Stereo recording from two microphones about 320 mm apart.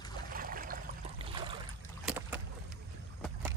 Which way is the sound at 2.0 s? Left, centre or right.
Centre.